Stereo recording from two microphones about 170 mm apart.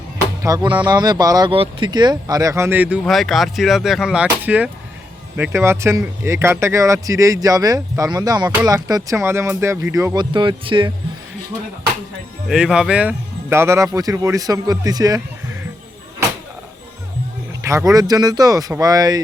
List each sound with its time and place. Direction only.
0.4 s speech: 20° right (ahead or behind)
3.0 s speech: centre (ahead or behind); by 10.2 s 15° right (ahead or behind)
10.3 s speech: 30° right (ahead or behind)
12.5 s speech: 5° right (ahead or behind); by 15.2 s 20° right (ahead or behind)
17.7 s speech: 20° right (ahead or behind)